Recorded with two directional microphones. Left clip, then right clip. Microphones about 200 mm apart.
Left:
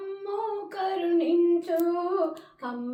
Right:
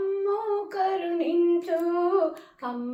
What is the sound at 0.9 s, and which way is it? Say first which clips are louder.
Female singing: left 1 dB; centre (ahead or behind).